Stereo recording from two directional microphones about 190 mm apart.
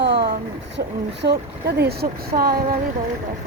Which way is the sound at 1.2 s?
60° right (ahead or behind).